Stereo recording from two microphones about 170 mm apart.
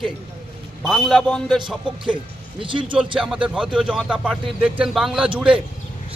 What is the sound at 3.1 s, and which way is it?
Speech, 5° right (ahead or behind).